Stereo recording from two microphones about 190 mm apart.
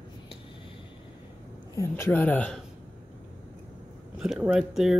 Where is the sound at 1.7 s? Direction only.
15° left (ahead or behind).